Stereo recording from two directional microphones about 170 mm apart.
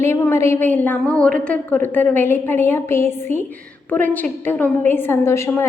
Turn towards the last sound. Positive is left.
turn(degrees=15)  # may be behind; listen again after turning